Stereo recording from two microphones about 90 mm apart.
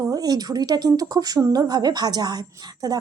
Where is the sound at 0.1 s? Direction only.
45° right (ahead or behind).